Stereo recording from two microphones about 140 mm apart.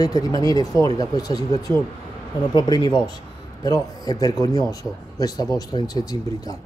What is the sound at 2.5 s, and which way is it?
Speech, 35° left (ahead or behind).